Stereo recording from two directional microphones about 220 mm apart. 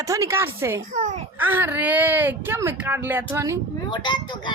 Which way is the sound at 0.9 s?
35° right (ahead or behind).